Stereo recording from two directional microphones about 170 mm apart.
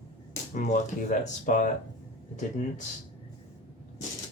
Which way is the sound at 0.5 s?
50° left (ahead or behind).